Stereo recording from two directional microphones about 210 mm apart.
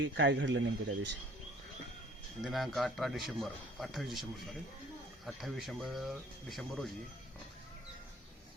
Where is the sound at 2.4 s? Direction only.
Centre (ahead or behind).